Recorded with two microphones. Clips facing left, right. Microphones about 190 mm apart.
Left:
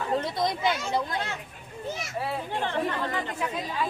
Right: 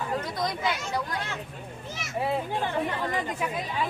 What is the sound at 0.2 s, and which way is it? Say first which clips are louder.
Speech: left 2 dB; 25° left (ahead or behind).